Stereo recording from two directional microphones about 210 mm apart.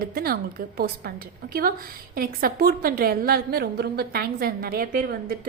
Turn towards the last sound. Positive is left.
turn(degrees=-40)  # may be behind; listen again after turning